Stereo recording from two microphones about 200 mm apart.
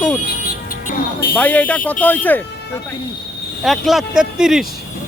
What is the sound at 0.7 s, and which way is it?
Music, 45° left (ahead or behind).